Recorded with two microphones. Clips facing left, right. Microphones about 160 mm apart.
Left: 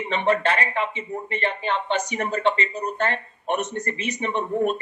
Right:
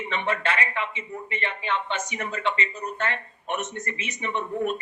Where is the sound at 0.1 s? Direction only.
35° left (ahead or behind).